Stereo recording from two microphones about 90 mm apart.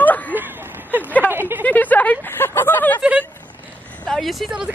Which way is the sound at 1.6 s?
20° left (ahead or behind).